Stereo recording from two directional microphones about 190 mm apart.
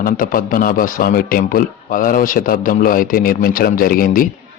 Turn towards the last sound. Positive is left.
turn(degrees=50)  # may be behind; listen again after turning